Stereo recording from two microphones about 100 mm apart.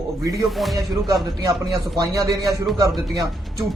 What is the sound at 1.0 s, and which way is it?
A man's voice, 35° right (ahead or behind).